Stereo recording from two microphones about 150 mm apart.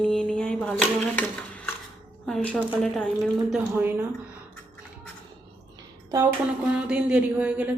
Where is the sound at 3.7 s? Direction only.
15° right (ahead or behind).